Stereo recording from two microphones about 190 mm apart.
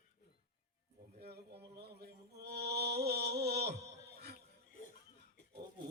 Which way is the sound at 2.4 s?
60° right (ahead or behind).